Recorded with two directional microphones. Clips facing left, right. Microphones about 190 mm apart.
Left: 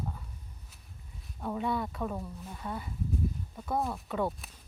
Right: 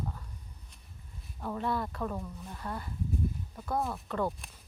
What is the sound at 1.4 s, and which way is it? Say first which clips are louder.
Speech: left 1 dB; 5° left (ahead or behind).